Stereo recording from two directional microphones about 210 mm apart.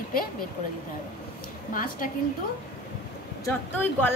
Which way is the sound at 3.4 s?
10° left (ahead or behind).